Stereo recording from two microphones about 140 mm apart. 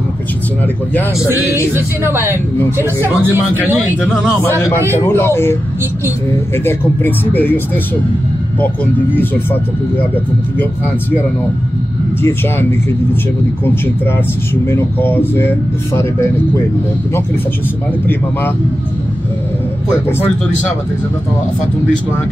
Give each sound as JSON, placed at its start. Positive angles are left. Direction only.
{"t": 1.7, "sound": "speech", "side_deg": -15}
{"t": 3.6, "sound": "speech", "side_deg": -10}
{"t": 4.4, "sound": "speech", "side_deg": 20}
{"t": 9.1, "sound": "speech", "side_deg": 15}
{"t": 14.5, "sound": "speech", "side_deg": 15}
{"t": 20.1, "sound": "speech", "side_deg": 15}